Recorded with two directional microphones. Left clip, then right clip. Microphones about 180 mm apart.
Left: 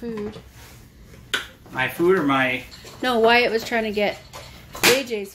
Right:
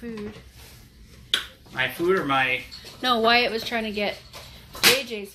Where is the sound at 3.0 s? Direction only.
15° left (ahead or behind).